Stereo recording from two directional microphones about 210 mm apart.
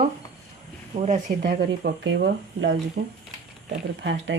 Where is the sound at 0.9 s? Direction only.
30° right (ahead or behind).